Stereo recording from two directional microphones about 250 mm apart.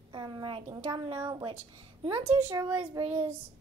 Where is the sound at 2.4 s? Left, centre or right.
Centre.